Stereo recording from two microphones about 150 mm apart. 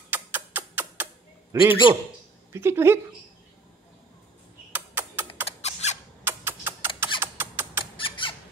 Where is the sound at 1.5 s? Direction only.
15° right (ahead or behind).